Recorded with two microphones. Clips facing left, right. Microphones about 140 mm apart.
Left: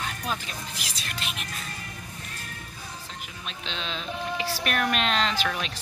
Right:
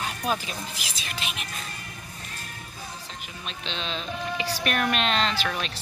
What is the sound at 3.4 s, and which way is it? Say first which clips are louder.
Speech: right 2 dB; 5° left (ahead or behind).